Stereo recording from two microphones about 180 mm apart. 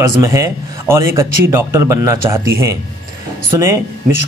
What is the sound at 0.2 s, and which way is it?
Speech, 15° right (ahead or behind).